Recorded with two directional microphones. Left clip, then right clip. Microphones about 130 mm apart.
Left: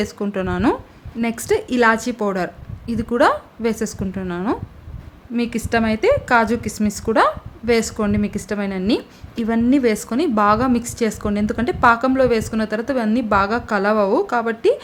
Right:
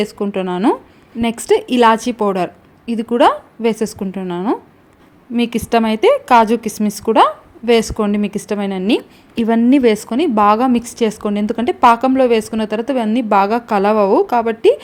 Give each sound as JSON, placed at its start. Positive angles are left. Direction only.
{"t": 0.0, "sound": "a woman's voice", "side_deg": -20}
{"t": 5.4, "sound": "a woman's voice", "side_deg": -30}